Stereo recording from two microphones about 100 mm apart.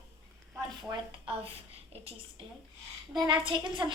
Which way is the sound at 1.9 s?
90° right.